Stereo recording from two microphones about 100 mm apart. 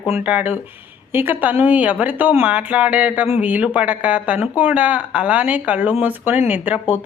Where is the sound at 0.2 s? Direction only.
15° right (ahead or behind).